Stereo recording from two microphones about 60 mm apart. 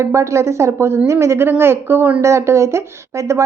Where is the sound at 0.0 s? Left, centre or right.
Right.